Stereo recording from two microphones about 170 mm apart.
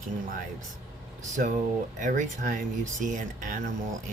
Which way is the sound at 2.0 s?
45° right (ahead or behind).